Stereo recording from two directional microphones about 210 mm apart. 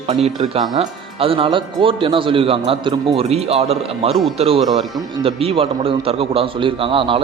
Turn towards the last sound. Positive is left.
turn(degrees=-25)  # may be behind; listen again after turning